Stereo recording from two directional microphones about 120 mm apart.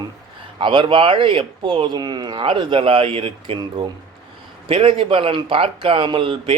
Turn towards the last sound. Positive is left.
turn(degrees=-45)  # may be behind; listen again after turning